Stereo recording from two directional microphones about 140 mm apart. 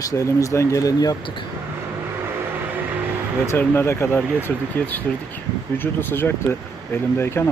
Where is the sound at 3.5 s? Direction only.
15° left (ahead or behind).